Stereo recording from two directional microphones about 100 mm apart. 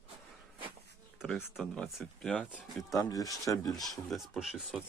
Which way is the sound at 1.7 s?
5° left (ahead or behind).